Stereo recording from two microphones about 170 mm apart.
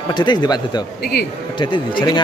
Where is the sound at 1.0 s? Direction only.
70° left (ahead or behind).